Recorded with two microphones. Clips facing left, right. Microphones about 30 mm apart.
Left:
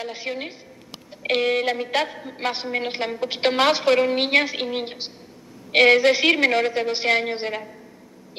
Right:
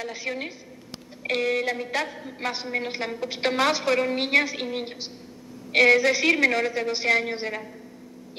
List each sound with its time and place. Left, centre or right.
0.0 s a woman's voice: left
2.0 s a woman's voice: centre